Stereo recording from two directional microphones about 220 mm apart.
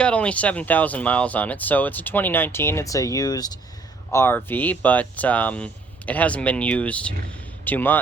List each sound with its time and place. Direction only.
0.0 s speech: 5° left (ahead or behind)